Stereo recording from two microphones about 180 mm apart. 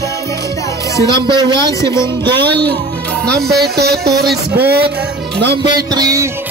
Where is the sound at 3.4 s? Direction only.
60° right (ahead or behind).